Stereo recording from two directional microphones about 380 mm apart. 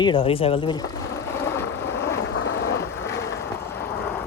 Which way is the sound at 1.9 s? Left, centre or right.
Left.